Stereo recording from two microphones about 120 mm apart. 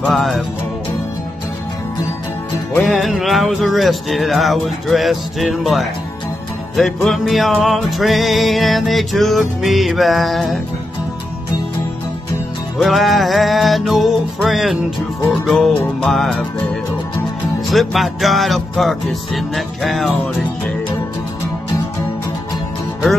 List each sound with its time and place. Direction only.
0.0 s music: 5° left (ahead or behind)
2.8 s music: centre (ahead or behind)
12.7 s music: centre (ahead or behind)
17.6 s music: centre (ahead or behind)